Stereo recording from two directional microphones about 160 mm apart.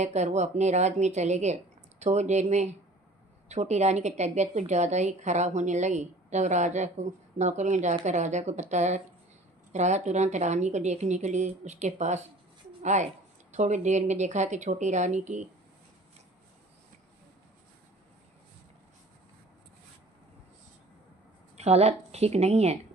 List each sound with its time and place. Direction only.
0.0 s a woman's voice: 45° right (ahead or behind)
21.5 s a woman's voice: 40° right (ahead or behind)